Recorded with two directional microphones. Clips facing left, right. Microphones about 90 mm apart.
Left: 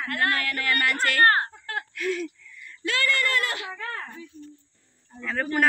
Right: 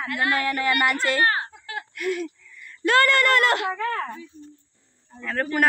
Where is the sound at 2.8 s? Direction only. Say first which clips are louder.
Right 7 dB; 55° right (ahead or behind); by 4.1 s 90° right.